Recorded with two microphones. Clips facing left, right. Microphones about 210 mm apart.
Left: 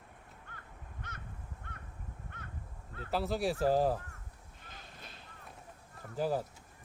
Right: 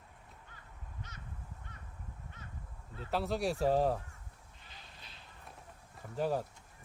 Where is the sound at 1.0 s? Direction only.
55° left (ahead or behind).